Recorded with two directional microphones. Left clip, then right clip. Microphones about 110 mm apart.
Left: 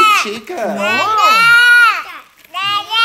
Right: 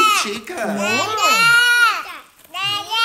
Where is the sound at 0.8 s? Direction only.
20° left (ahead or behind).